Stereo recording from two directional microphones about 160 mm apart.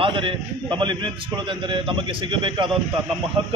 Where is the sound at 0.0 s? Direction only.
35° right (ahead or behind).